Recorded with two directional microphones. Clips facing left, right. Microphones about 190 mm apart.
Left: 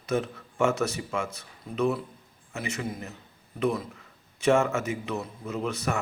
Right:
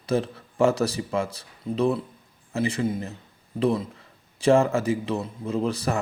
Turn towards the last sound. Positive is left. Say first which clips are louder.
# right 4 dB
turn(degrees=-35)  # may be behind; listen again after turning